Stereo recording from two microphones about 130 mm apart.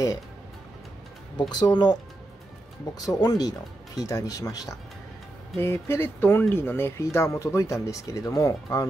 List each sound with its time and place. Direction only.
1.5 s speech: 35° left (ahead or behind)